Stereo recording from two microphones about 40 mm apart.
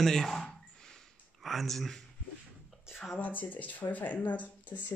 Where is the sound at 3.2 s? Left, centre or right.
Left.